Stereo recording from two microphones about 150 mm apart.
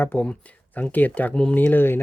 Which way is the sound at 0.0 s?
10° left (ahead or behind).